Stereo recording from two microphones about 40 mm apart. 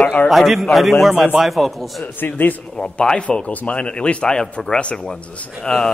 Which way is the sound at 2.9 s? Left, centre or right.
Centre.